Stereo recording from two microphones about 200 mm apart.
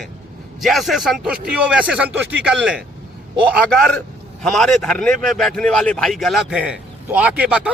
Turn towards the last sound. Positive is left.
turn(degrees=-5)  # may be behind; listen again after turning